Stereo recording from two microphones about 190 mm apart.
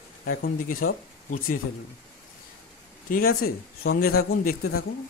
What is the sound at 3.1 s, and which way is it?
Speech, 55° left (ahead or behind).